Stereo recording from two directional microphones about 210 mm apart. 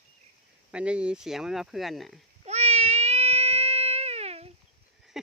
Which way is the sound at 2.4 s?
30° right (ahead or behind).